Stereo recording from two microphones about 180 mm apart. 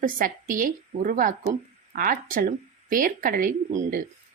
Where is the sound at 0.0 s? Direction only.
50° right (ahead or behind).